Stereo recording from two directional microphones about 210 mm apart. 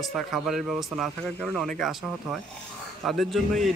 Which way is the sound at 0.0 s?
Centre (ahead or behind).